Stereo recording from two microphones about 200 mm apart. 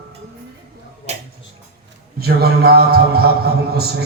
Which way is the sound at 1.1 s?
35° right (ahead or behind).